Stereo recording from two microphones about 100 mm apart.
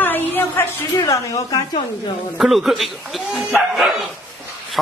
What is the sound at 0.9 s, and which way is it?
Speech, 35° left (ahead or behind).